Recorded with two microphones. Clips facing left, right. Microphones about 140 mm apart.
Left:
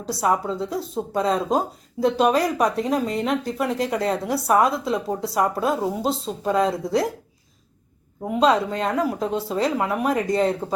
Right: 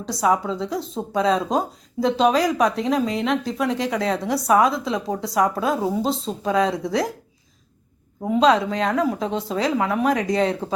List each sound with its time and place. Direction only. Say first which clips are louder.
0.0 s speech: right 1 dB; 5° left (ahead or behind)
2.3 s speech: right 1 dB; 80° right
2.6 s speech: right 1 dB; 5° left (ahead or behind)
8.3 s speech: right 2 dB; 5° left (ahead or behind)